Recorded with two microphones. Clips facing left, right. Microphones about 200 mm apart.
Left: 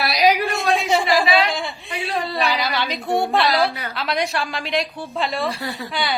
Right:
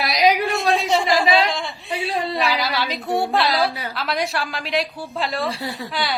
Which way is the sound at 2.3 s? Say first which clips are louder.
Even; centre (ahead or behind).